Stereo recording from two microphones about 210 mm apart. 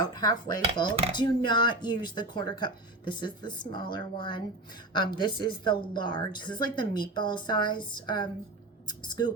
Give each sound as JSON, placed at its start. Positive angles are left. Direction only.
{"t": 0.2, "sound": "a woman's voice", "side_deg": 20}